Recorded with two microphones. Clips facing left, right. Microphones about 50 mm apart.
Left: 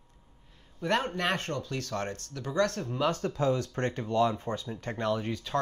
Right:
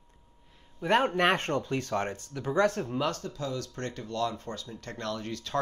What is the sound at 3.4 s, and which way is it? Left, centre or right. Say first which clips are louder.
Speech: left 6 dB; left.